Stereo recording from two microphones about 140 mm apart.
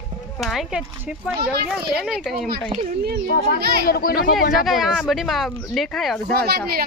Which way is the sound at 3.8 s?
90° left.